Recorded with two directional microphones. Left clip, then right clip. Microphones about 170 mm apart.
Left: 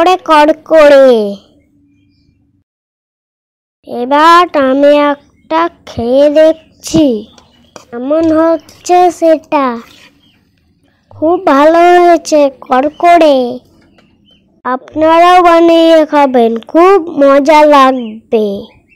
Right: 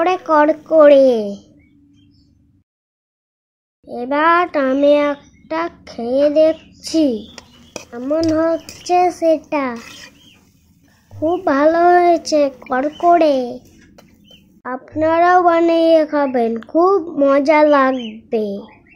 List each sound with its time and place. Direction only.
0.0 s a woman's voice: 45° left (ahead or behind)
3.8 s a woman's voice: 40° left (ahead or behind)
11.2 s speech: 40° left (ahead or behind)